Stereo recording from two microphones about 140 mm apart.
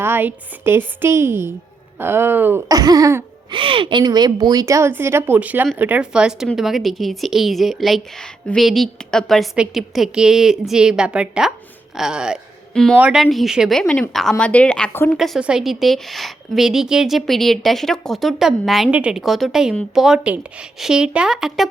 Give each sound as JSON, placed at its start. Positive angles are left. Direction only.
{"t": 0.0, "sound": "a woman's voice", "side_deg": -15}
{"t": 2.6, "sound": "speech", "side_deg": -25}
{"t": 3.5, "sound": "a woman's voice", "side_deg": -40}
{"t": 13.0, "sound": "a woman's voice", "side_deg": -10}
{"t": 15.2, "sound": "a woman's voice", "side_deg": -5}